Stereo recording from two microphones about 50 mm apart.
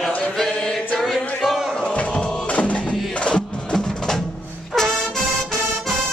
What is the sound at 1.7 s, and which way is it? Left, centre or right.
Music, left.